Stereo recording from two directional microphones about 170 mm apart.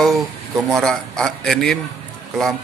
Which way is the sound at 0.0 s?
Centre (ahead or behind).